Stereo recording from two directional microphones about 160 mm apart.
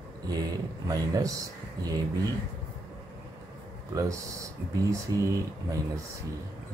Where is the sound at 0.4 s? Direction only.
25° right (ahead or behind).